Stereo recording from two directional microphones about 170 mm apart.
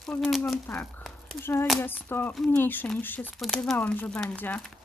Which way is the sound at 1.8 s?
10° left (ahead or behind).